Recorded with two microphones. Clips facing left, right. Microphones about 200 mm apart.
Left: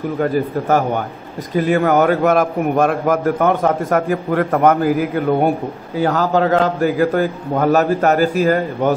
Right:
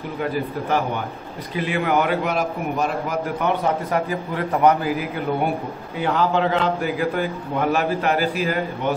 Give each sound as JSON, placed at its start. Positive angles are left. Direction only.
{"t": 0.2, "sound": "a man's voice", "side_deg": 45}